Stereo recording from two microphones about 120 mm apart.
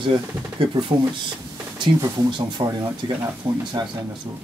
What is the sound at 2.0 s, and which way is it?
Speech, 40° right (ahead or behind).